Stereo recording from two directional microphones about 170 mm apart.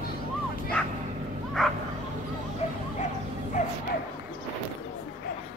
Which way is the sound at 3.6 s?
45° left (ahead or behind).